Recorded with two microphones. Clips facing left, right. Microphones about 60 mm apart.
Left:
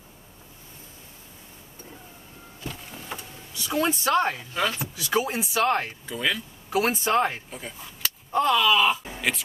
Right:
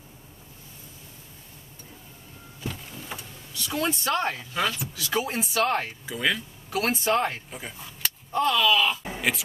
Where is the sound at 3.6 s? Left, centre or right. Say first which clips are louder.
Left 3 dB; centre.